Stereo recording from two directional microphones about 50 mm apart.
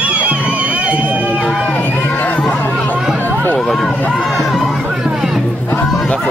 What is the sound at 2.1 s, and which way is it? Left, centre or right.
Chatter, left.